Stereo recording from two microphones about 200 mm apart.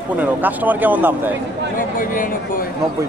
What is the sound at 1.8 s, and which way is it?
Speech, 45° left (ahead or behind).